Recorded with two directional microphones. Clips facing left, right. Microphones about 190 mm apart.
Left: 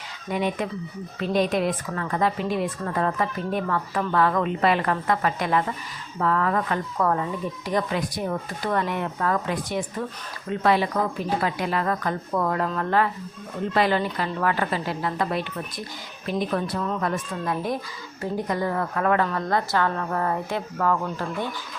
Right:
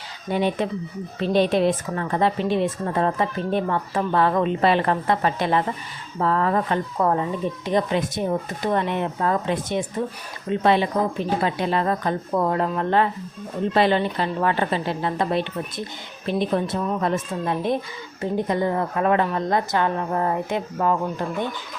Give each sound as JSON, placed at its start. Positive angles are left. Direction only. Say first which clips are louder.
{"t": 0.3, "sound": "a woman's voice", "louder": "right 3 dB", "side_deg": -30}